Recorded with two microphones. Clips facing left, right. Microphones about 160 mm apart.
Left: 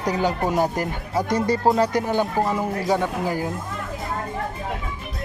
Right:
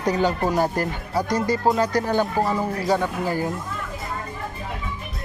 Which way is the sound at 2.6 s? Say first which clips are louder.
Even; 20° left (ahead or behind).